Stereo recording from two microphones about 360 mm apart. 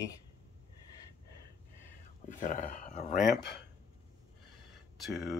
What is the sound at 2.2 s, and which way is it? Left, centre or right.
Speech, left.